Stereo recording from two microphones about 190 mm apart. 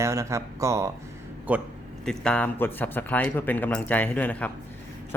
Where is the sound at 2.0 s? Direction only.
5° left (ahead or behind).